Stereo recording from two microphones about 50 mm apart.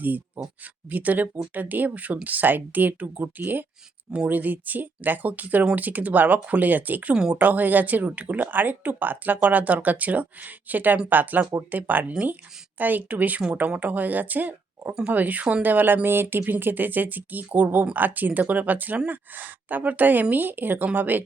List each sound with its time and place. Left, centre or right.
0.9 s speech: right
7.1 s speech: centre
7.3 s speech: right